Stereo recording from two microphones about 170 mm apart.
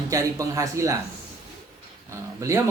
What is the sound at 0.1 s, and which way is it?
Speech, 20° right (ahead or behind).